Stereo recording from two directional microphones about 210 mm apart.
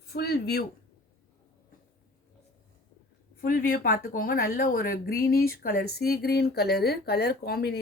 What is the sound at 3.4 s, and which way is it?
Speech, 45° left (ahead or behind).